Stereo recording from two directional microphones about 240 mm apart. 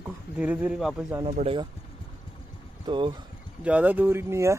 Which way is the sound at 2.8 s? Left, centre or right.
Centre.